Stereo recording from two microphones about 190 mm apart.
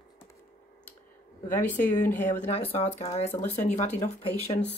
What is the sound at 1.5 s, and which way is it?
Speech, 10° left (ahead or behind).